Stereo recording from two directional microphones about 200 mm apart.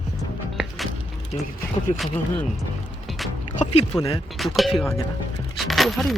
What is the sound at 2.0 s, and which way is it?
Speech, 10° left (ahead or behind).